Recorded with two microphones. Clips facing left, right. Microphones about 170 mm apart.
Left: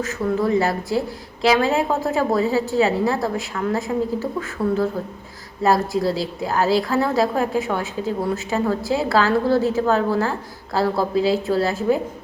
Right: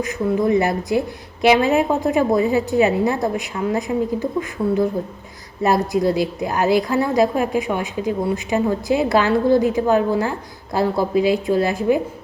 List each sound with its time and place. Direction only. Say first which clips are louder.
0.0 s a woman's voice: right 2 dB; 20° right (ahead or behind)